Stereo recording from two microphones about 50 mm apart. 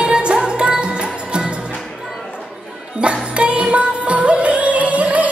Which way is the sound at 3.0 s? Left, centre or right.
Right.